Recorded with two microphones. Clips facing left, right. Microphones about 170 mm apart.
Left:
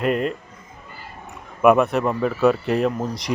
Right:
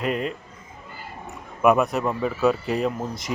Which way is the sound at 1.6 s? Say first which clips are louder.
Left 3 dB; centre (ahead or behind).